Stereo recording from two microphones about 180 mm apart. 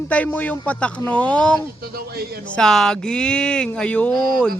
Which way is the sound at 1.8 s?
60° right (ahead or behind).